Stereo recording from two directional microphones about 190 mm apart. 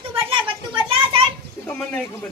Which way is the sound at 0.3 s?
30° right (ahead or behind).